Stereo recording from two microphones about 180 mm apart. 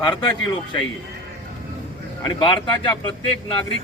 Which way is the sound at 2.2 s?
25° left (ahead or behind).